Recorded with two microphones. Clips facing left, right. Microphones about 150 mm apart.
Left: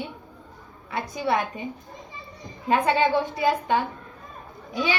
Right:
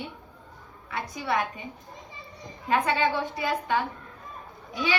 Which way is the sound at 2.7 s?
25° left (ahead or behind).